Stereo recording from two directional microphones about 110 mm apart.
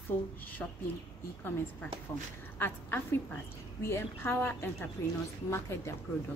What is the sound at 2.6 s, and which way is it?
Speech, 15° left (ahead or behind).